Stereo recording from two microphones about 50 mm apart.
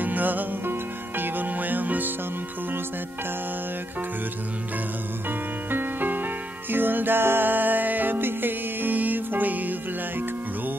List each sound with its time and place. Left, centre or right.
0.0 s music: right
5.7 s music: right